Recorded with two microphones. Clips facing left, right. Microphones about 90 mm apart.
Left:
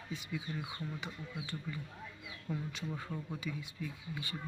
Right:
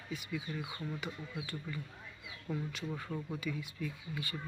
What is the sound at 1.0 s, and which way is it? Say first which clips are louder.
Speech: right 2 dB; 20° left (ahead or behind).